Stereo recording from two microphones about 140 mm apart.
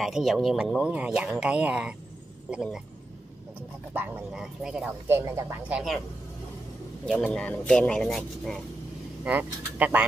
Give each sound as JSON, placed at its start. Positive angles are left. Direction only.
{"t": 0.0, "sound": "speech", "side_deg": 0}
{"t": 3.9, "sound": "speech", "side_deg": -15}
{"t": 5.0, "sound": "speech", "side_deg": -15}
{"t": 7.1, "sound": "speech", "side_deg": 5}
{"t": 9.2, "sound": "speech", "side_deg": -10}